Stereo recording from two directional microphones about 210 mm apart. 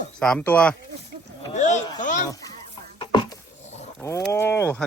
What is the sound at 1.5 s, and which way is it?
Speech, 35° left (ahead or behind).